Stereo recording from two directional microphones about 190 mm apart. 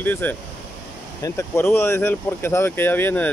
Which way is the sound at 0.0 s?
10° left (ahead or behind).